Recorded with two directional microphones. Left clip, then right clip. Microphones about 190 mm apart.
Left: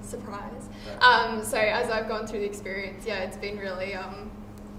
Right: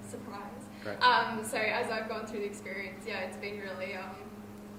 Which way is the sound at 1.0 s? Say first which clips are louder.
Left 7 dB; 25° left (ahead or behind).